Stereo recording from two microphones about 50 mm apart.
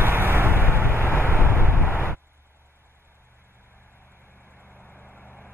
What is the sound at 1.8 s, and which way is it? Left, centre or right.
Vehicle, left.